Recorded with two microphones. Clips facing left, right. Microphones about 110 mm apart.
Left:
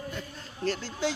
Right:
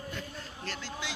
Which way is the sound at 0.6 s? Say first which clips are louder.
Left 10 dB; 40° left (ahead or behind).